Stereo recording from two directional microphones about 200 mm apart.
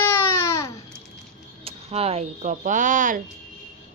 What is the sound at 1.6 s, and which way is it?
Speech, 30° right (ahead or behind).